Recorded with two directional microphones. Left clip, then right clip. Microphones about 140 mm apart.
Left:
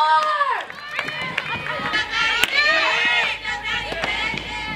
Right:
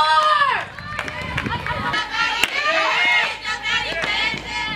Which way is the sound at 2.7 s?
30° right (ahead or behind).